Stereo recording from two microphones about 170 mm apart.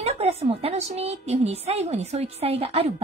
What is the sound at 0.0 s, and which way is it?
A woman's voice, 35° right (ahead or behind).